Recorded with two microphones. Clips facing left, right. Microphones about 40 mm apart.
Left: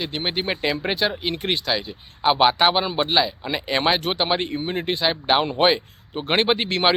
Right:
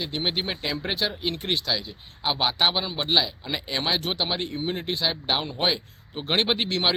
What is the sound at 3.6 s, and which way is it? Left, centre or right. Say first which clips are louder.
Speech: left 6 dB; left.